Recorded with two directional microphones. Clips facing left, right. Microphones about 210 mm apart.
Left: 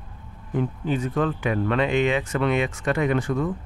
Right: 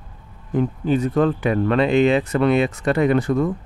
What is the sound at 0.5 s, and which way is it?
Speech, 40° right (ahead or behind).